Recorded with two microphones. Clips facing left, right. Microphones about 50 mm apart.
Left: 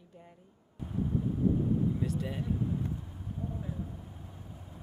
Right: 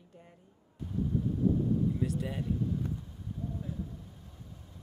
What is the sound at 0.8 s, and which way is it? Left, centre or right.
Vehicle, left.